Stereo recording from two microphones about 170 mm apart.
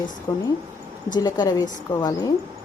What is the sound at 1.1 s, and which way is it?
Speech, 20° left (ahead or behind).